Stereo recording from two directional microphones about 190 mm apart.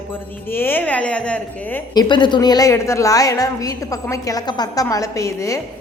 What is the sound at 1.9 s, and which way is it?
A woman's voice, 25° left (ahead or behind).